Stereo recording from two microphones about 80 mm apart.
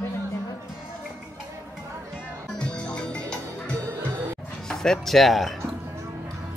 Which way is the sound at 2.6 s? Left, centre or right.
Centre.